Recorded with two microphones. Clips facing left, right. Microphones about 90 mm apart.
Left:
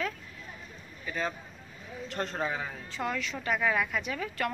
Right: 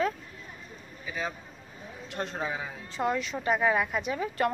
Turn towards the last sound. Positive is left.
turn(degrees=-25)  # may be behind; listen again after turning